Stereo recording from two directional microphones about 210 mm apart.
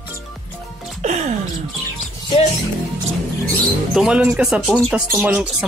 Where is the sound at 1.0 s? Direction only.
35° right (ahead or behind).